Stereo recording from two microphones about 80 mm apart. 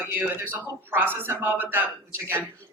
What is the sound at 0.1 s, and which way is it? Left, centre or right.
A man's voice, right.